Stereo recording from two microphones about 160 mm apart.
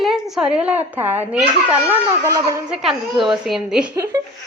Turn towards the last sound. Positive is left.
turn(degrees=-20)  # may be behind; listen again after turning